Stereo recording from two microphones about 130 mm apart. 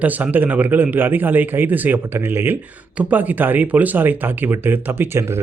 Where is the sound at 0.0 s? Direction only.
10° right (ahead or behind).